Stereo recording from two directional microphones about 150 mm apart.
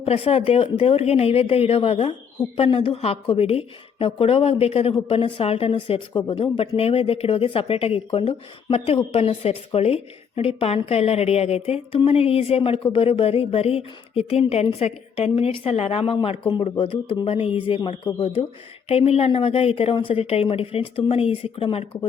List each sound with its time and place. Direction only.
0.0 s a woman's voice: 40° left (ahead or behind)